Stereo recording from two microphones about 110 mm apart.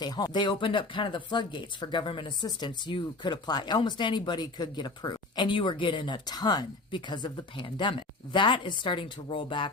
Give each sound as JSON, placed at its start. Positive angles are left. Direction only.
{"t": 0.0, "sound": "speech", "side_deg": 40}